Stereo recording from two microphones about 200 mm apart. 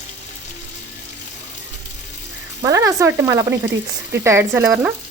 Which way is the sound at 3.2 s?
15° right (ahead or behind).